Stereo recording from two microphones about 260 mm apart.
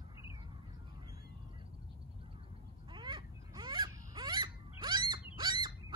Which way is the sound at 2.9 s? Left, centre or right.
Centre.